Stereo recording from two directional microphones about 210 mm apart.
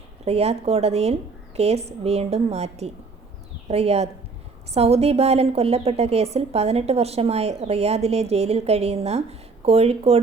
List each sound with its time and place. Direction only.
0.3 s a woman's voice: 30° right (ahead or behind)